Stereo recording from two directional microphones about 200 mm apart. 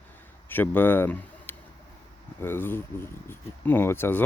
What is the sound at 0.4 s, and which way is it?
A man's voice, 10° left (ahead or behind).